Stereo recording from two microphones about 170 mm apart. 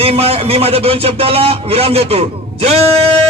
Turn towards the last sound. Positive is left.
turn(degrees=-40)  # may be behind; listen again after turning